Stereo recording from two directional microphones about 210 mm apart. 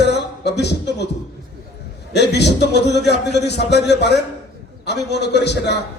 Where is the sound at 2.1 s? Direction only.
55° left (ahead or behind).